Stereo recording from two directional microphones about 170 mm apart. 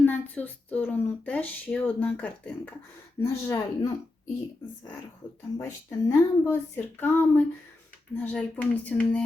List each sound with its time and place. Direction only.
0.0 s speech: 10° left (ahead or behind)
5.5 s speech: 15° left (ahead or behind)